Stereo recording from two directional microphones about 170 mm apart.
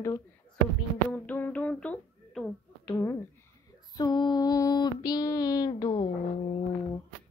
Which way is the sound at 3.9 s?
25° left (ahead or behind).